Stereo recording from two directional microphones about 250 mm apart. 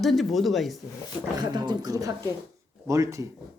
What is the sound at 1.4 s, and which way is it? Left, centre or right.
Speech, centre.